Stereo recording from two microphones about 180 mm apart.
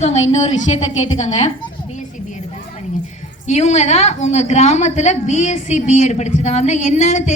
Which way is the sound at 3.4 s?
40° left (ahead or behind).